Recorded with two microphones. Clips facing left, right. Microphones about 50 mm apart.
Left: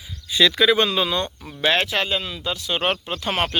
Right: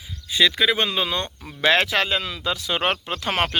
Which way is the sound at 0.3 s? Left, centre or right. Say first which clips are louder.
Left 2 dB; centre.